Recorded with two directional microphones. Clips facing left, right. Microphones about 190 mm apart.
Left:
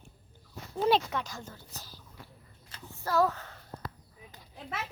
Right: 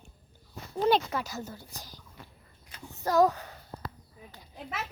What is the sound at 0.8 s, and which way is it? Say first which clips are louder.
Speech: right 1 dB; centre (ahead or behind).